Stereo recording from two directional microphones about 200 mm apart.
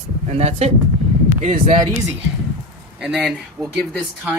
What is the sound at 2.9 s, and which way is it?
Speech, 5° right (ahead or behind).